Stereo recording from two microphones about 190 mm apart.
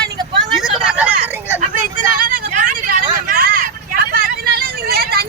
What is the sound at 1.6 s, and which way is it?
Vehicle, 45° right (ahead or behind).